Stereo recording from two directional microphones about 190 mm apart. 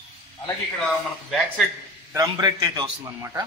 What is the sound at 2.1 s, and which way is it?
A man's voice, 20° right (ahead or behind).